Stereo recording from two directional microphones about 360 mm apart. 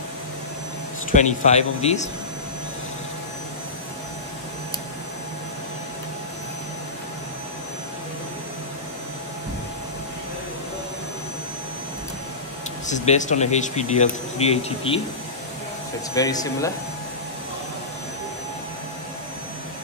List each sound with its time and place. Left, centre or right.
1.1 s speech: centre
12.8 s speech: centre
16.2 s speech: centre